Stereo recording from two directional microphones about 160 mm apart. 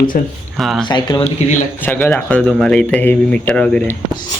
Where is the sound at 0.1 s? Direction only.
60° left (ahead or behind).